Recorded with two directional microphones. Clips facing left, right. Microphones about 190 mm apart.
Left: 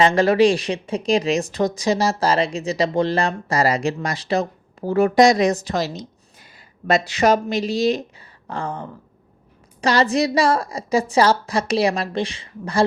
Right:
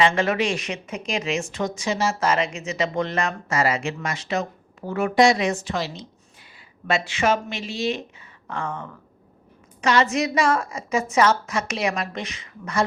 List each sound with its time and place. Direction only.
0.0 s speech: 35° left (ahead or behind)